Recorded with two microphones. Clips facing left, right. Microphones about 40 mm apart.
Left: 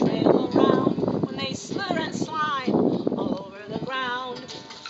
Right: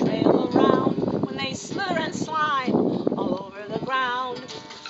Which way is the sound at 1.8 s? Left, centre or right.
Centre.